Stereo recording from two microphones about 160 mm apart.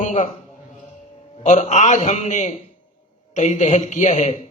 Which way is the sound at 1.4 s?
45° left (ahead or behind).